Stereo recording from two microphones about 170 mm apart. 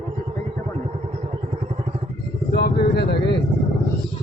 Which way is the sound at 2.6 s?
75° left (ahead or behind).